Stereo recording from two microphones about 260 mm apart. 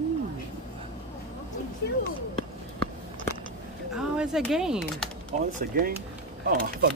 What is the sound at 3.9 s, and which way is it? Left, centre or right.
Speech, centre.